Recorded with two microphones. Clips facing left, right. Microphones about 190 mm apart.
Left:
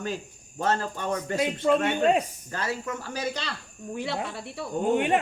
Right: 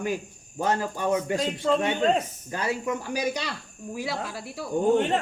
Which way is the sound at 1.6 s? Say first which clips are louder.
Left 1 dB; 10° left (ahead or behind).